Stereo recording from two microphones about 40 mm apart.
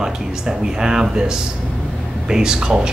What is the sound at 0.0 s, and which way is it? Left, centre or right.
Speech, centre.